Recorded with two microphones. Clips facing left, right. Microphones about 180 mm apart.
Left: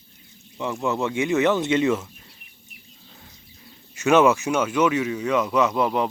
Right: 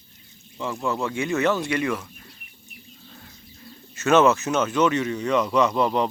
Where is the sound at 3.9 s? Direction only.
15° left (ahead or behind).